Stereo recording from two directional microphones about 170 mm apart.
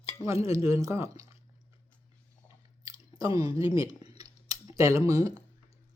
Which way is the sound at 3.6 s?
20° right (ahead or behind).